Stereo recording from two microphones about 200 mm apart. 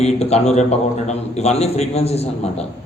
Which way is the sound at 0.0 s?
30° left (ahead or behind).